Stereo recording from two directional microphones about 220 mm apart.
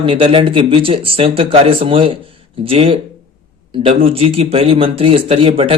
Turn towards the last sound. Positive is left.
turn(degrees=-25)  # may be behind; listen again after turning